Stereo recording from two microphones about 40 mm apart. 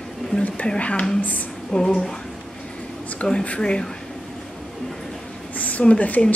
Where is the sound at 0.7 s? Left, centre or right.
Left.